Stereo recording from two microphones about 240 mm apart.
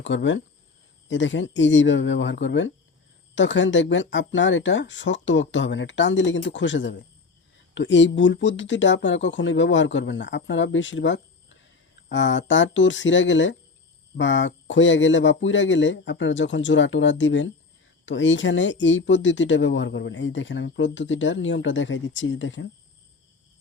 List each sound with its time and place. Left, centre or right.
0.0 s speech: left